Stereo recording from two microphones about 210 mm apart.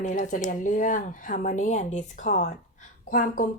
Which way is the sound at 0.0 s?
35° left (ahead or behind).